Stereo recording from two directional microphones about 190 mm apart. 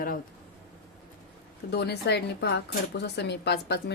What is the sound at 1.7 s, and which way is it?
A woman's voice, 60° left (ahead or behind).